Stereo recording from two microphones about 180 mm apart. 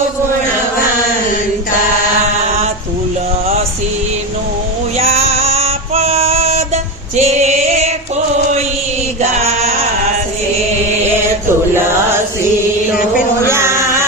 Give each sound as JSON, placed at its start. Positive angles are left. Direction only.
{"t": 4.9, "sound": "female singing", "side_deg": -35}
{"t": 7.2, "sound": "music", "side_deg": -40}
{"t": 9.2, "sound": "chant", "side_deg": -40}
{"t": 13.5, "sound": "chant", "side_deg": -15}